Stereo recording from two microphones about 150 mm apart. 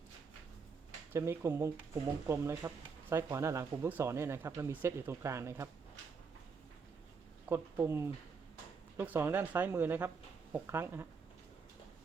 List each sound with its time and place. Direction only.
1.1 s speech: 15° right (ahead or behind)
7.4 s speech: 15° right (ahead or behind)